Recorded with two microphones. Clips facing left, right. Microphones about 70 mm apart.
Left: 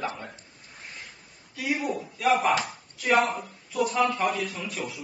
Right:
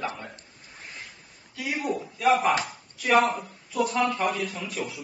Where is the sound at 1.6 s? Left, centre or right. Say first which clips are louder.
Left 1 dB; centre.